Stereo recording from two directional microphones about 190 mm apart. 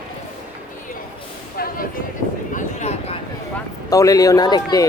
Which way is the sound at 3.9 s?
15° left (ahead or behind).